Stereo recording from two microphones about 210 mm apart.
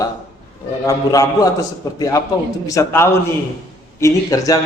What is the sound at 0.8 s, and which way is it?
Speech, 15° left (ahead or behind).